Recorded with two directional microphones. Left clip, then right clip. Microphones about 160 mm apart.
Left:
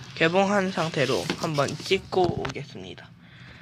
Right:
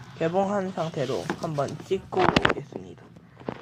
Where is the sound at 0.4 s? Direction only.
30° left (ahead or behind).